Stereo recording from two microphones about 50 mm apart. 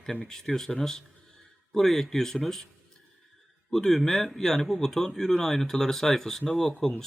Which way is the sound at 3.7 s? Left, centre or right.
Centre.